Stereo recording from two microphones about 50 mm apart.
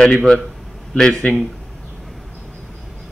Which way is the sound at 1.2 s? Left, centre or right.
Left.